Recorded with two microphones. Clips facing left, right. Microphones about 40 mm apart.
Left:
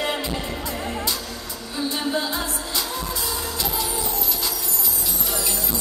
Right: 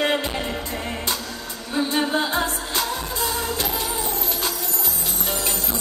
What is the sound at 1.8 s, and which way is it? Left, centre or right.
Music, right.